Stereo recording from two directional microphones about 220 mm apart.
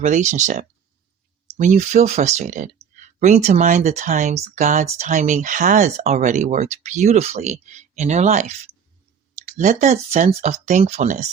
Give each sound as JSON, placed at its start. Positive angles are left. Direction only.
{"t": 0.0, "sound": "speech", "side_deg": -30}
{"t": 9.5, "sound": "speech", "side_deg": -35}